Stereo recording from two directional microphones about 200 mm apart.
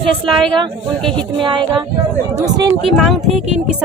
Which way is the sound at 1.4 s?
25° right (ahead or behind).